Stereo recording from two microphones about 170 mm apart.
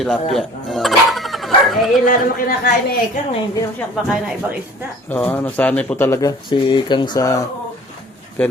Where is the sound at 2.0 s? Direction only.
55° left (ahead or behind).